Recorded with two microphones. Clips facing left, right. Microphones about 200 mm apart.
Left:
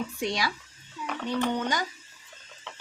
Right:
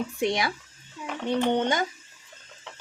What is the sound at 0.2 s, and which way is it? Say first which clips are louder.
Speech: right 5 dB; 20° right (ahead or behind).